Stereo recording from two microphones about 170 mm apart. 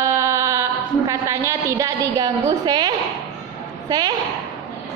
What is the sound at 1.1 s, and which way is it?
A woman's voice, 15° right (ahead or behind).